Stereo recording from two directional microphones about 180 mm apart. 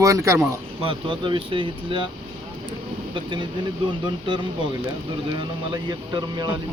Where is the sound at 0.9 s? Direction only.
30° right (ahead or behind).